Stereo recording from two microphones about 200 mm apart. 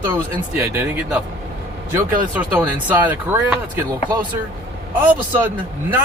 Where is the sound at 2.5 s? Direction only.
10° right (ahead or behind).